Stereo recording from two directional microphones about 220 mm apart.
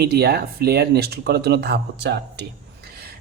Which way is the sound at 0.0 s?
45° right (ahead or behind).